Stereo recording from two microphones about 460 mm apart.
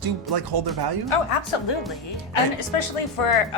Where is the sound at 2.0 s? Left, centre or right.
Left.